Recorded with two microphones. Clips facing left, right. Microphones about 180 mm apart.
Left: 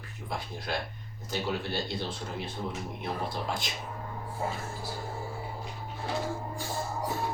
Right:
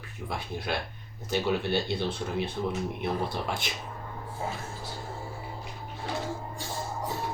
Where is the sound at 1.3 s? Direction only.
65° right (ahead or behind).